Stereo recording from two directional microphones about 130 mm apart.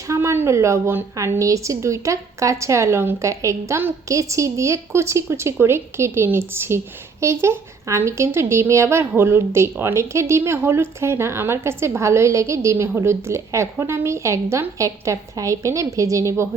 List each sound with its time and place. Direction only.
0.1 s a woman's voice: 20° right (ahead or behind)